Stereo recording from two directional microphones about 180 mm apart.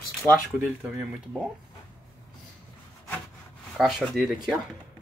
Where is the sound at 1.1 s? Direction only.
Centre (ahead or behind).